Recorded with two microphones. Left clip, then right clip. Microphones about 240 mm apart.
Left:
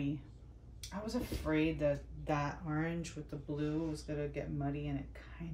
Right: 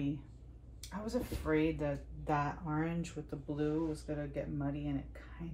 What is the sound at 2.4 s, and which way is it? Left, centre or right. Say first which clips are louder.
Speech: right 1 dB; centre.